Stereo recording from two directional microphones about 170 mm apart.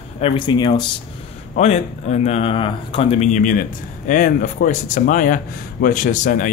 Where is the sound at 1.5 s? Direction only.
40° left (ahead or behind).